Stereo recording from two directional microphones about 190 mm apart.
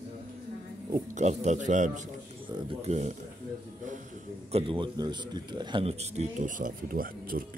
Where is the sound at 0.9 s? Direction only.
40° right (ahead or behind).